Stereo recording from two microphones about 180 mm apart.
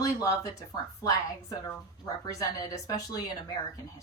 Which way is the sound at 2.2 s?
20° left (ahead or behind).